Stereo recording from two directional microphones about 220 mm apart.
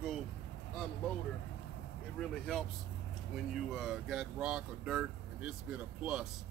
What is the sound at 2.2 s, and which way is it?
Speech, centre (ahead or behind).